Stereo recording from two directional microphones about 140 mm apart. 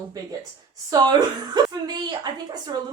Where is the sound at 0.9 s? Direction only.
30° right (ahead or behind).